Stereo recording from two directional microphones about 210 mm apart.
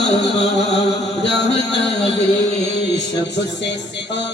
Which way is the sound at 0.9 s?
55° left (ahead or behind).